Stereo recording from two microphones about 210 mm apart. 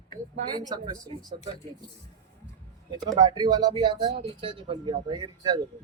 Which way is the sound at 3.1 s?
20° right (ahead or behind).